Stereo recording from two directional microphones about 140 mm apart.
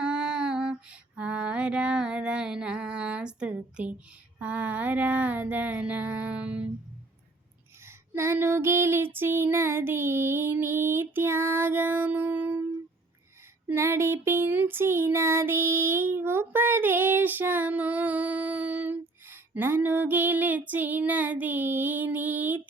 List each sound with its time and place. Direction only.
0.0 s female singing: 5° right (ahead or behind)
4.4 s a sound: 10° right (ahead or behind)
7.9 s female singing: 15° right (ahead or behind)
13.7 s female singing: 20° right (ahead or behind)
16.1 s child singing: 15° right (ahead or behind)